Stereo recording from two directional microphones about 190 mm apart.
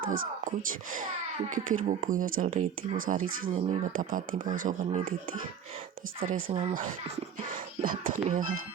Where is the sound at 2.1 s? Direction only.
45° right (ahead or behind).